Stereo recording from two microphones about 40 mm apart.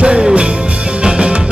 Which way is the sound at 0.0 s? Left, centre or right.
Right.